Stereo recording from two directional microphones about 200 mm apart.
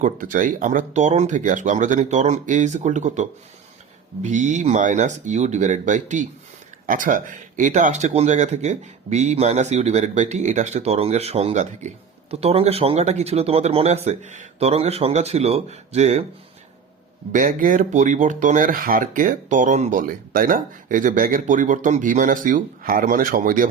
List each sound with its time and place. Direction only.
0.0 s speech: 45° right (ahead or behind)
17.3 s speech: 40° right (ahead or behind)